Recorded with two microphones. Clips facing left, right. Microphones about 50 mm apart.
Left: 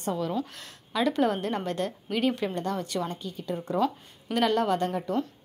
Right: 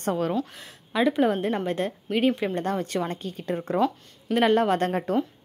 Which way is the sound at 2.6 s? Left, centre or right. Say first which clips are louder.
Right 3 dB; right.